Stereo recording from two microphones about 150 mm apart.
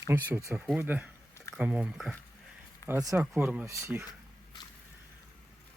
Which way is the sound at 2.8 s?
20° left (ahead or behind).